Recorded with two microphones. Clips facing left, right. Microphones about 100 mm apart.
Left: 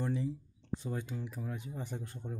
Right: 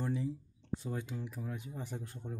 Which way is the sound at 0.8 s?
Centre (ahead or behind).